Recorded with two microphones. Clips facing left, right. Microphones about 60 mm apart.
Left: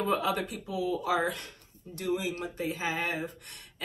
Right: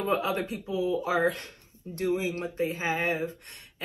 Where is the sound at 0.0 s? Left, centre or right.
Right.